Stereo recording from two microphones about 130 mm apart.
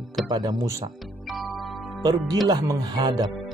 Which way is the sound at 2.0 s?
30° right (ahead or behind).